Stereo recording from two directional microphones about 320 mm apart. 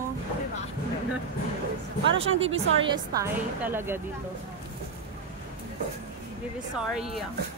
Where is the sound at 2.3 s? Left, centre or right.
Right.